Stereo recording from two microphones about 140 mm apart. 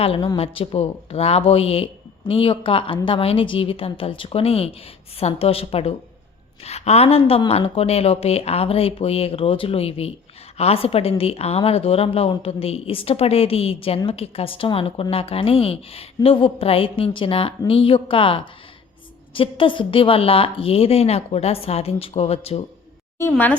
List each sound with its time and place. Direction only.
0.0 s a woman's voice: 45° left (ahead or behind)
23.3 s speech: 15° left (ahead or behind)